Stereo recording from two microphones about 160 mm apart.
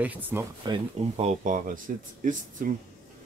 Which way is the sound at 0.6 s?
35° right (ahead or behind).